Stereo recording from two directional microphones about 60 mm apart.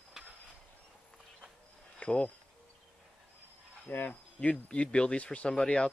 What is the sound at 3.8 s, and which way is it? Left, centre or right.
Speech, left.